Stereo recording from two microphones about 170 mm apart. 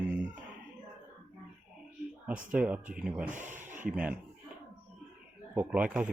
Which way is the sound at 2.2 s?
5° right (ahead or behind).